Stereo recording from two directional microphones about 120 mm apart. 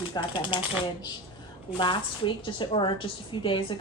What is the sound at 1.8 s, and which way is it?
A woman's voice, 45° left (ahead or behind).